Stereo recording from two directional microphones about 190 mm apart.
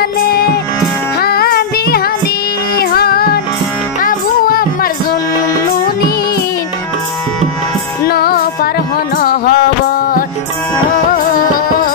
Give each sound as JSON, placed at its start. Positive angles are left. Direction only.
{"t": 1.2, "sound": "music", "side_deg": 55}
{"t": 2.8, "sound": "child singing", "side_deg": 55}
{"t": 4.0, "sound": "music", "side_deg": 50}
{"t": 8.1, "sound": "music", "side_deg": 55}
{"t": 11.1, "sound": "music", "side_deg": 50}